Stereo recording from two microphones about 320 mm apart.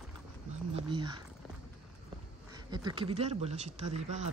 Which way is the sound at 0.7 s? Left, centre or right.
Centre.